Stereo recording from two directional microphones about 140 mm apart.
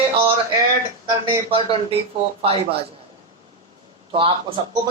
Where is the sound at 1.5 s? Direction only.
40° right (ahead or behind).